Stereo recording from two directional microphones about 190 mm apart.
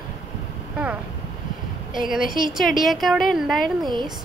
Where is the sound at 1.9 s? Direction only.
Centre (ahead or behind).